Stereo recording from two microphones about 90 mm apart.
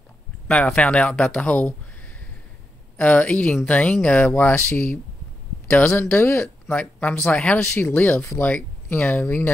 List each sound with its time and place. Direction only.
0.5 s speech: 10° left (ahead or behind); by 6.4 s 25° left (ahead or behind)
6.4 s speech: 10° left (ahead or behind)
7.7 s speech: 25° left (ahead or behind)
8.4 s speech: 15° left (ahead or behind)
8.8 s speech: 25° left (ahead or behind)